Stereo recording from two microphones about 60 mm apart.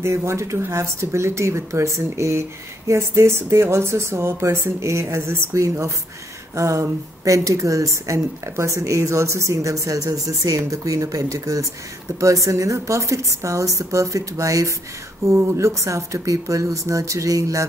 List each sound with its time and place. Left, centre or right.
0.0 s a woman's voice: right
15.2 s a woman's voice: right